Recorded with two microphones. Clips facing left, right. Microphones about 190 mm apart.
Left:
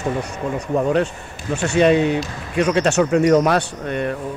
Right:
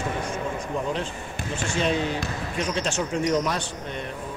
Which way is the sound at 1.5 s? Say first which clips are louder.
Left 10 dB; 65° left (ahead or behind).